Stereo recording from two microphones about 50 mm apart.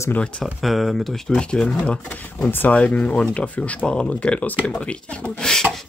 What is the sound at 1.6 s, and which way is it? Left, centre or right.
Speech, centre.